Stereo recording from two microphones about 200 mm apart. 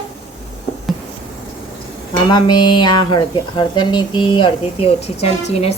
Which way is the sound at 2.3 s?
20° left (ahead or behind).